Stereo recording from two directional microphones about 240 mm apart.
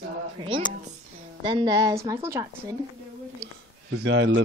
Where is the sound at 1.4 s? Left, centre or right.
Centre.